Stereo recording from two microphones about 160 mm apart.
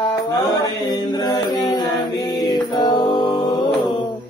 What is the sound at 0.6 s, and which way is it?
Mantra, 25° left (ahead or behind).